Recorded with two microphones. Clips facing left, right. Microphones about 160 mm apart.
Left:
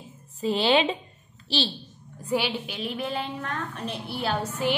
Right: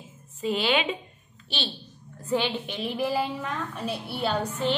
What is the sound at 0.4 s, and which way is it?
Speech, 35° left (ahead or behind).